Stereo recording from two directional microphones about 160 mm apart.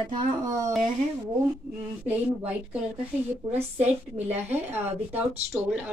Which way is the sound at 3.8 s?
10° right (ahead or behind).